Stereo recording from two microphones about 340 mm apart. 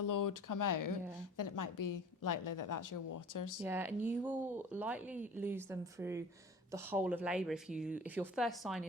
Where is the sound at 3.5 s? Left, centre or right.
Centre.